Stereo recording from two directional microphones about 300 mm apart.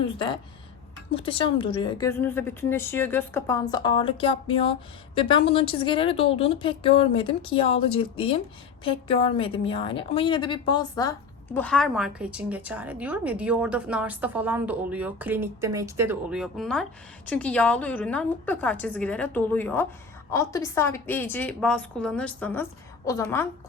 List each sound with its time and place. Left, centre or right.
0.0 s a woman's voice: centre